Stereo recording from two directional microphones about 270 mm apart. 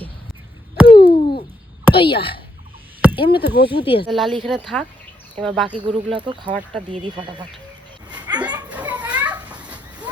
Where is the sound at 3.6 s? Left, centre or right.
Centre.